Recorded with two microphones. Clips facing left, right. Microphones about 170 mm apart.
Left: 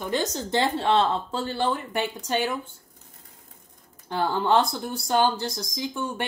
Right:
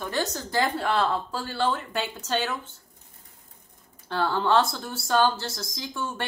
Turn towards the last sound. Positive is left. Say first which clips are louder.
# left 3 dB
turn(degrees=15)  # may be behind; listen again after turning